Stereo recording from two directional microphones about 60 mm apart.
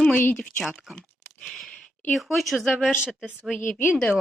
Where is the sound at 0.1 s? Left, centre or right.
Left.